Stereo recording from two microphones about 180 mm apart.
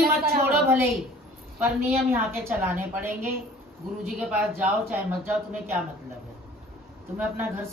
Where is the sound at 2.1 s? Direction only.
10° right (ahead or behind).